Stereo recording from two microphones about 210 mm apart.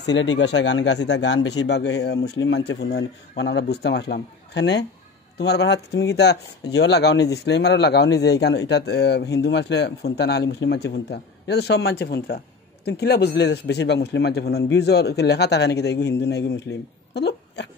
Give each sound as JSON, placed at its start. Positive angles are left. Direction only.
{"t": 0.0, "sound": "speech", "side_deg": 55}